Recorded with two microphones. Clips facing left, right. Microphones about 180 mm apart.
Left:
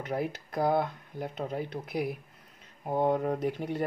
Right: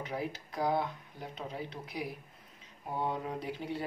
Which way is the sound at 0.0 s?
55° left (ahead or behind).